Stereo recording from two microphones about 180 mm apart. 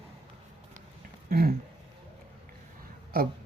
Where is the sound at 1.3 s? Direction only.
55° right (ahead or behind).